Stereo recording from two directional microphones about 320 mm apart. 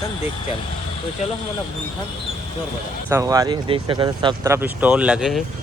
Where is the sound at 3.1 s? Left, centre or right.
Centre.